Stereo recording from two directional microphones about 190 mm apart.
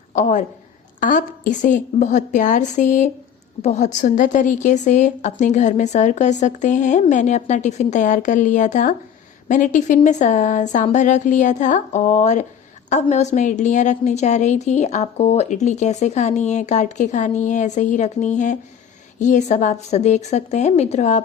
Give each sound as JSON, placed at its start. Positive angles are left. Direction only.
{"t": 0.1, "sound": "a woman's voice", "side_deg": 40}